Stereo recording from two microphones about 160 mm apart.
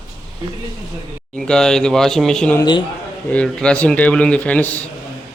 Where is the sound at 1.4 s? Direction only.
5° left (ahead or behind).